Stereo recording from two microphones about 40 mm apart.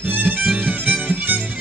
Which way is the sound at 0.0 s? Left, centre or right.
Right.